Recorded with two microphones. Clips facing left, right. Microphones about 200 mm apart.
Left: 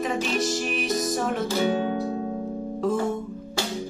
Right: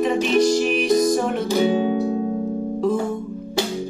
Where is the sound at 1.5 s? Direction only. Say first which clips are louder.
Right 8 dB; 15° right (ahead or behind).